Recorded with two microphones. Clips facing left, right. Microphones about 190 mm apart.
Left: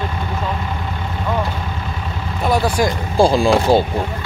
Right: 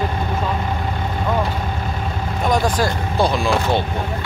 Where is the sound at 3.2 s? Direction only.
30° left (ahead or behind).